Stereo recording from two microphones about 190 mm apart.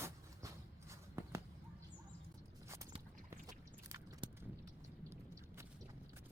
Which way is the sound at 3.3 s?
20° right (ahead or behind).